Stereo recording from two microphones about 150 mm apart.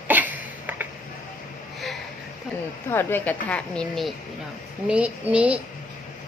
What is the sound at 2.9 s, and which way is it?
A woman's voice, 15° left (ahead or behind).